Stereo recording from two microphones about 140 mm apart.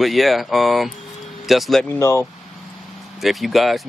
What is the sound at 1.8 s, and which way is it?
Speech, 20° left (ahead or behind).